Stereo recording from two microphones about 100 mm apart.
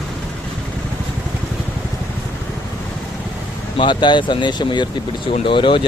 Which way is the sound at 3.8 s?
50° left (ahead or behind).